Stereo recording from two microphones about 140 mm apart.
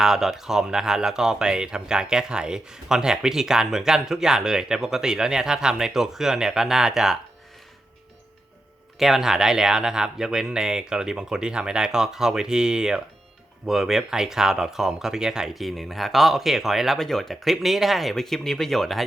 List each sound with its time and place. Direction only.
0.0 s speech: 5° right (ahead or behind)
9.0 s speech: centre (ahead or behind)